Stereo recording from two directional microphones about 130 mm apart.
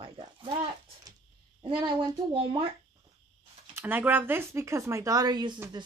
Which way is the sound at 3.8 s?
15° right (ahead or behind).